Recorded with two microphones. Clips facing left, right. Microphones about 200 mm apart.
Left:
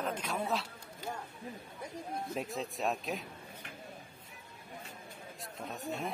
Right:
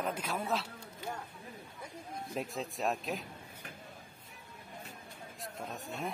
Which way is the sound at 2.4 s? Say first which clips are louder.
Right 2 dB; centre (ahead or behind).